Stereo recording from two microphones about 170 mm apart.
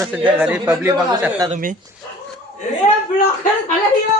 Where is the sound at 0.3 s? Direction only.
5° right (ahead or behind).